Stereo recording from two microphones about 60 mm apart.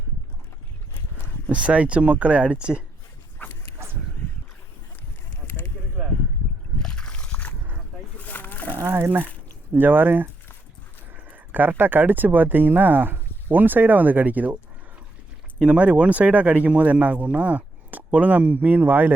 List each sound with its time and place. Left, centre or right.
1.5 s speech: right
3.4 s dog: left
6.7 s slosh: centre
8.2 s wild animals: left
8.8 s speech: right
11.3 s speech: right
15.6 s speech: right